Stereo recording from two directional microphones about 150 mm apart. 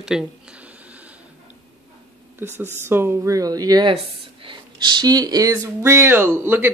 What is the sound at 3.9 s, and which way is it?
Speech, 35° right (ahead or behind).